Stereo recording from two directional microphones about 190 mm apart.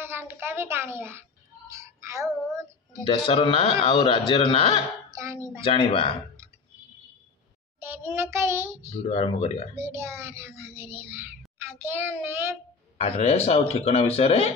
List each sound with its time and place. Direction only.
0.0 s a child's voice: 10° right (ahead or behind)
1.7 s child singing: 15° right (ahead or behind)
3.3 s a man's voice: 30° left (ahead or behind)
5.1 s a child's voice: 15° right (ahead or behind)
5.6 s a man's voice: 25° left (ahead or behind)
7.8 s a child's voice: 10° right (ahead or behind)
8.9 s speech: 35° left (ahead or behind)
9.8 s a child's voice: 15° right (ahead or behind)
12.9 s speech: 30° left (ahead or behind)